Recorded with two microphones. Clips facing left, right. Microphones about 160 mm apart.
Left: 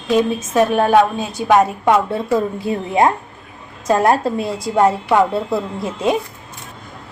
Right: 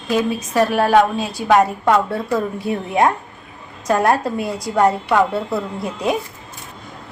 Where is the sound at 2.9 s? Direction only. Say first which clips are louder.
Left 2 dB; 25° left (ahead or behind).